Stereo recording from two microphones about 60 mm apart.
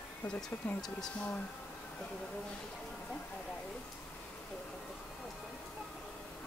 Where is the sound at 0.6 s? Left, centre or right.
Centre.